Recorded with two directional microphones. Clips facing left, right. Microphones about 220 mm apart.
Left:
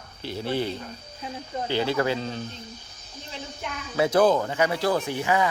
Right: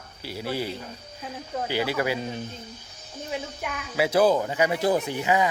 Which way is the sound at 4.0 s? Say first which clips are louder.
Left 1 dB; 10° right (ahead or behind).